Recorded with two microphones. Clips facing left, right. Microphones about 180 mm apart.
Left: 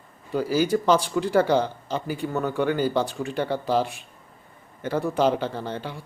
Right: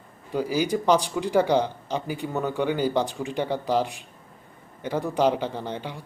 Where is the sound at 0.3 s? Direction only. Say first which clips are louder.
Left 2 dB; 15° right (ahead or behind).